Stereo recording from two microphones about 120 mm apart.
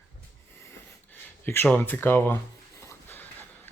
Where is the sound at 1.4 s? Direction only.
20° left (ahead or behind).